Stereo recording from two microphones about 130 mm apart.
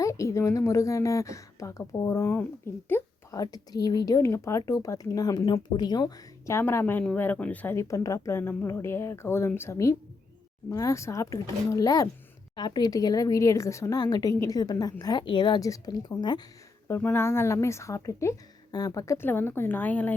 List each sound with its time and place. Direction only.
0.0 s speech: 25° left (ahead or behind)
3.3 s speech: 30° left (ahead or behind)
16.9 s speech: 15° left (ahead or behind)